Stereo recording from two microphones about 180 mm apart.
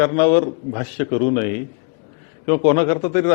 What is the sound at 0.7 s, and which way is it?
Speech, 15° left (ahead or behind).